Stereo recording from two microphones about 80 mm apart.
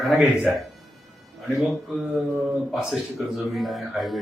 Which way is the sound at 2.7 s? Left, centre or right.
Centre.